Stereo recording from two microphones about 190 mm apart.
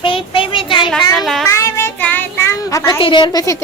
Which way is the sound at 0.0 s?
30° left (ahead or behind).